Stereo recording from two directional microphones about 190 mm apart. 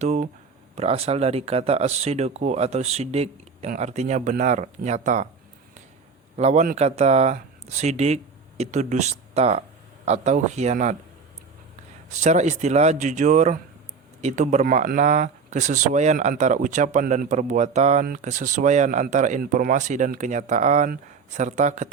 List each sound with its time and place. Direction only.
0.0 s speech: 35° right (ahead or behind)
6.3 s speech: 35° right (ahead or behind)
12.2 s speech: 35° right (ahead or behind)